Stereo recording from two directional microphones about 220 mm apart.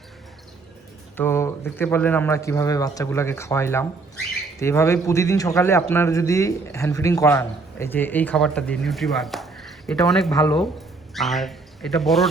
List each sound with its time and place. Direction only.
1.1 s a man's voice: 10° left (ahead or behind)